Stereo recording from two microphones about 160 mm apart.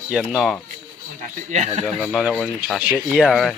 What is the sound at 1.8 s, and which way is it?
Speech, 5° left (ahead or behind).